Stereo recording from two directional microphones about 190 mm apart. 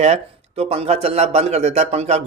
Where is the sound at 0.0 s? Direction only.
35° right (ahead or behind).